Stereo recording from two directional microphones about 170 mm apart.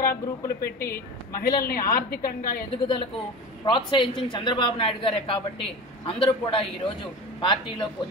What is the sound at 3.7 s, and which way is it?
A woman's voice, 30° left (ahead or behind).